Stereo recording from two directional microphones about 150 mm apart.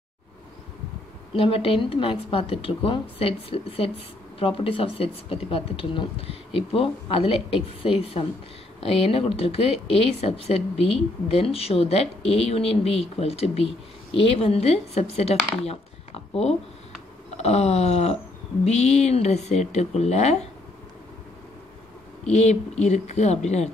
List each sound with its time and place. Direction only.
1.3 s a woman's voice: 40° left (ahead or behind)
22.2 s speech: 50° left (ahead or behind)